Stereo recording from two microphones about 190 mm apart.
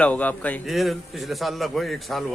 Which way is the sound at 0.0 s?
10° left (ahead or behind).